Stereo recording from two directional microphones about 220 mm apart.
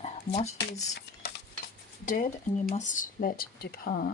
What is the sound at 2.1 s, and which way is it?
Speech, 35° left (ahead or behind).